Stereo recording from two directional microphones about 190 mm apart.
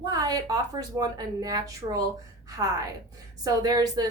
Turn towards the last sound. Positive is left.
turn(degrees=-20)  # may be behind; listen again after turning